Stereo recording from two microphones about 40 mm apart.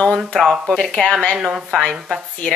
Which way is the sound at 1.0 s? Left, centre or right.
Left.